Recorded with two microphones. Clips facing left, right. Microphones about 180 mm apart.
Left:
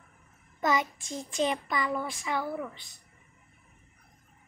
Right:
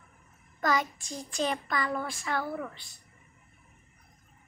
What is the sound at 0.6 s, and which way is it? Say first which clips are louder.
Child singing: left 1 dB; 20° left (ahead or behind).